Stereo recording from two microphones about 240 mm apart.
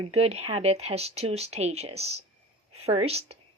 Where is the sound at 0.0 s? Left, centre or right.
Right.